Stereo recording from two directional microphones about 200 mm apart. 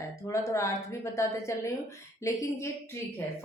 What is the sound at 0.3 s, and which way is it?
Speech, 15° left (ahead or behind).